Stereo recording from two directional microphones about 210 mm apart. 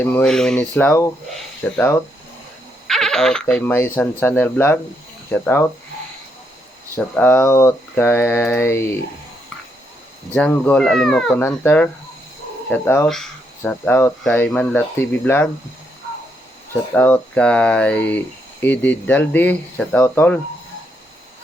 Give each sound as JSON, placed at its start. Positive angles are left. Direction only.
{"t": 0.0, "sound": "speech", "side_deg": 5}
{"t": 2.8, "sound": "a sound", "side_deg": 0}
{"t": 3.4, "sound": "speech", "side_deg": 10}
{"t": 6.9, "sound": "speech", "side_deg": 10}
{"t": 10.3, "sound": "speech", "side_deg": 5}
{"t": 16.9, "sound": "speech", "side_deg": 10}